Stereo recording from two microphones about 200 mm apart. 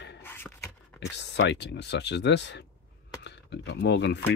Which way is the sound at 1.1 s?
60° left (ahead or behind).